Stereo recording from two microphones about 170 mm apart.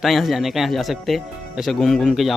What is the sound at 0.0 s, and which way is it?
Speech, centre (ahead or behind).